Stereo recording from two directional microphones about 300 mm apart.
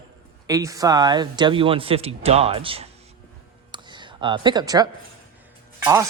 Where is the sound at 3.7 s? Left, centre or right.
Centre.